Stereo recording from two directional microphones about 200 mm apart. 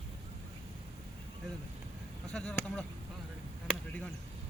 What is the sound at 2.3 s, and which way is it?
Speech, 5° left (ahead or behind).